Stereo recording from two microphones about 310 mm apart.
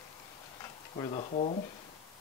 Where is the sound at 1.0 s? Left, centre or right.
Centre.